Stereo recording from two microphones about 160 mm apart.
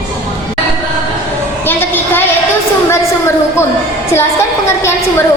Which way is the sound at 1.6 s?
15° left (ahead or behind).